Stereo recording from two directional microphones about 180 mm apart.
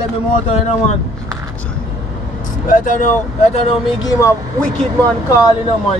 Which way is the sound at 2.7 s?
45° left (ahead or behind).